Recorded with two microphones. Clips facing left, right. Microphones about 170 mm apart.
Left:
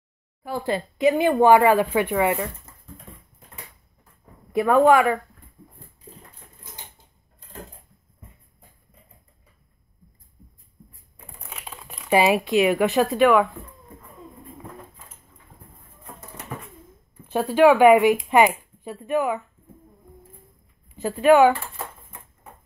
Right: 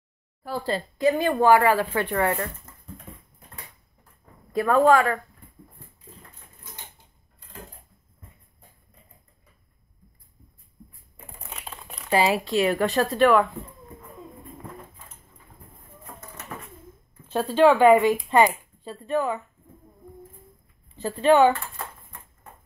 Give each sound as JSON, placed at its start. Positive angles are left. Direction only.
{"t": 0.5, "sound": "speech", "side_deg": 20}
{"t": 4.5, "sound": "speech", "side_deg": 20}
{"t": 11.1, "sound": "a sound", "side_deg": 0}
{"t": 12.1, "sound": "speech", "side_deg": 20}
{"t": 13.0, "sound": "speech", "side_deg": 0}
{"t": 17.3, "sound": "speech", "side_deg": 15}
{"t": 21.0, "sound": "speech", "side_deg": 10}